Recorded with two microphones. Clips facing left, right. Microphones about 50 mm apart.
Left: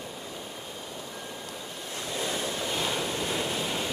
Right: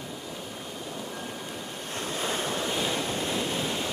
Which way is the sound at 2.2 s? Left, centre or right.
Right.